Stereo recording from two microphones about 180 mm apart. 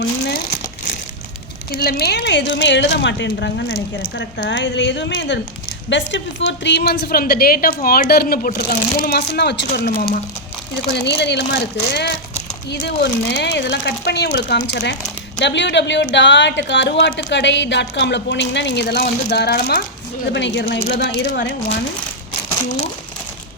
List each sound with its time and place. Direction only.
1.7 s a woman's voice: 60° left (ahead or behind)
10.9 s a woman's voice: 70° left (ahead or behind)
20.3 s a woman's voice: 80° left